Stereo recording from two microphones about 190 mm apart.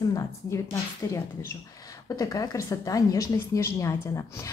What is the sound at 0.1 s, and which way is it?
Speech, 20° left (ahead or behind).